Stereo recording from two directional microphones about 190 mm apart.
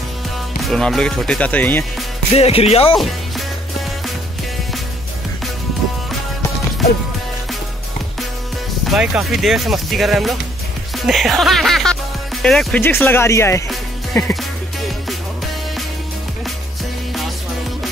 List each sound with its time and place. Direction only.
0.6 s speech: centre (ahead or behind)
2.3 s speech: 35° left (ahead or behind)
8.8 s speech: 5° right (ahead or behind); by 13.7 s 15° left (ahead or behind)
14.2 s music: 15° left (ahead or behind)